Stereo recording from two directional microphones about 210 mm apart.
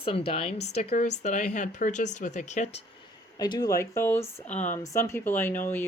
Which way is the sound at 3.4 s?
20° left (ahead or behind).